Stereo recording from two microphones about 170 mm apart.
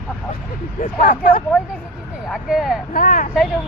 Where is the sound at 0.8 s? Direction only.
55° left (ahead or behind).